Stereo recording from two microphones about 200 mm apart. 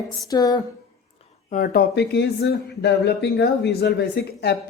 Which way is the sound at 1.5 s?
45° left (ahead or behind).